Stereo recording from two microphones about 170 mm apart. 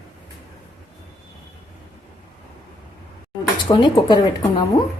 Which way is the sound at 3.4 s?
25° left (ahead or behind).